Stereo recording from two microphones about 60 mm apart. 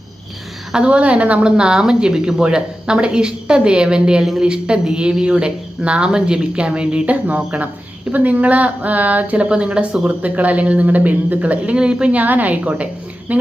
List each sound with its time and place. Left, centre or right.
0.7 s a woman's voice: centre